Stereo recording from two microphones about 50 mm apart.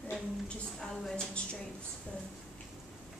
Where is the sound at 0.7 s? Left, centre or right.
Centre.